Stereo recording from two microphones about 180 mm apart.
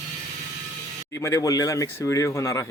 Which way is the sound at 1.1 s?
15° left (ahead or behind).